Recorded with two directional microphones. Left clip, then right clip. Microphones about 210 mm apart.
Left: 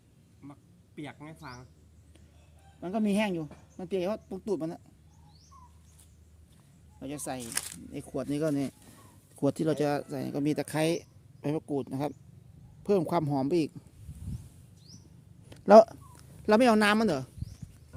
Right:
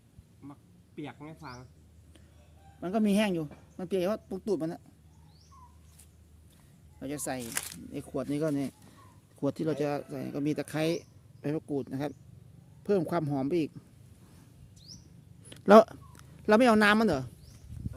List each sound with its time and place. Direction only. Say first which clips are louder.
0.4 s a man's voice: right 1 dB; 30° left (ahead or behind)
2.8 s speech: right 1 dB; 10° right (ahead or behind)
7.0 s speech: right 1 dB; 10° right (ahead or behind)
7.4 s speech: even; 5° left (ahead or behind)
15.4 s a sound: left 2 dB; 10° right (ahead or behind)